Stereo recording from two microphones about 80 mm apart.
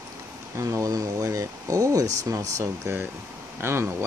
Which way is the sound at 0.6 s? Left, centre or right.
Right.